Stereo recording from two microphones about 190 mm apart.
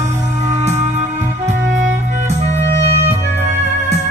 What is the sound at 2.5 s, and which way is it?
Music, 35° right (ahead or behind).